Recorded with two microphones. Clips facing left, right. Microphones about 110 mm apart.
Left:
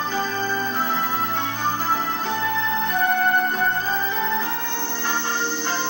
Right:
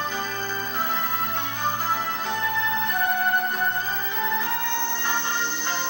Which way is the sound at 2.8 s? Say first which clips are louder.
Left 6 dB; 15° right (ahead or behind).